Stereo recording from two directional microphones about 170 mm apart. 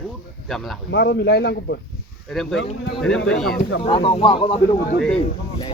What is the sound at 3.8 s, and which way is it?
Speech, 30° left (ahead or behind).